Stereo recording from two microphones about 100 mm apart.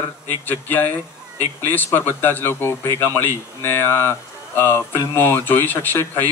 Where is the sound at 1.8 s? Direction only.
20° left (ahead or behind).